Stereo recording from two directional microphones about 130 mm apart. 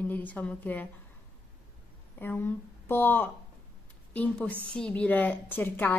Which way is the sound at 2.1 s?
15° left (ahead or behind).